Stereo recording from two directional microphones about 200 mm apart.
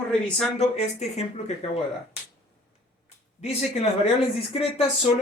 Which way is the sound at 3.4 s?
30° left (ahead or behind).